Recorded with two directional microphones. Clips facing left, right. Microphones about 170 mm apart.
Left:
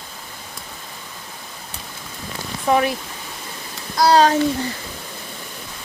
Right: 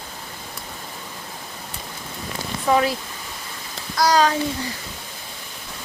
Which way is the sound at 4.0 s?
30° left (ahead or behind).